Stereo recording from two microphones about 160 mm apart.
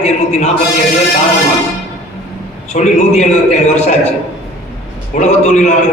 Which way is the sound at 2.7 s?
50° left (ahead or behind).